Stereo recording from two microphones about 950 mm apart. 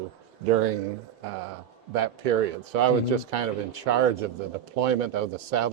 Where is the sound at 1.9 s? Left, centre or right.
Right.